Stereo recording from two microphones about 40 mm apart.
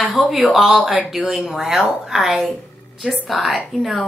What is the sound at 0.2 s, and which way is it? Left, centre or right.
Speech, centre.